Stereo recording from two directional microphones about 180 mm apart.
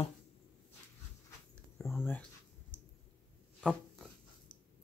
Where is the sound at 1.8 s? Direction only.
Centre (ahead or behind).